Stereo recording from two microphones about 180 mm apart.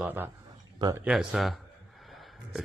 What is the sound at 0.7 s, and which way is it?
Speech, 20° right (ahead or behind).